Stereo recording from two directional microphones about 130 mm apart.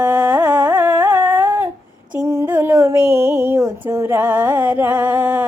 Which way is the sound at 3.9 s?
20° right (ahead or behind).